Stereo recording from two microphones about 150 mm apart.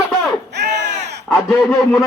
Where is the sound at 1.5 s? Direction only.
Centre (ahead or behind).